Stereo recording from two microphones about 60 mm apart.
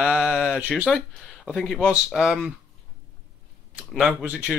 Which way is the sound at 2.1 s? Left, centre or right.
Centre.